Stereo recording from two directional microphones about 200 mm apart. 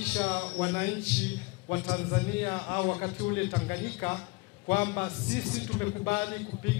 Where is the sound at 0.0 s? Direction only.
5° left (ahead or behind).